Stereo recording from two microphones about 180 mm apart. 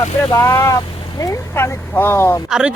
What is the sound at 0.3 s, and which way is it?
Speech, 15° left (ahead or behind).